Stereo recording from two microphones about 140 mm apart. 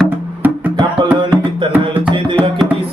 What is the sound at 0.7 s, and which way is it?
Music, 35° right (ahead or behind).